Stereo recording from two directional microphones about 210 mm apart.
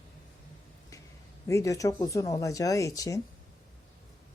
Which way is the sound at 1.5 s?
15° left (ahead or behind).